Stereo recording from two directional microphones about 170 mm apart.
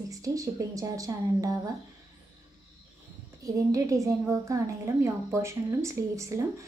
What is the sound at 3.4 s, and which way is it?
A woman's voice, 20° right (ahead or behind).